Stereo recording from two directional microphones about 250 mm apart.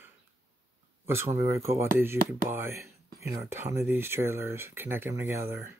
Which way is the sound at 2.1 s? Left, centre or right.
Right.